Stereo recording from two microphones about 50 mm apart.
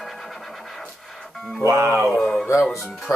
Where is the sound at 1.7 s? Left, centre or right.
Right.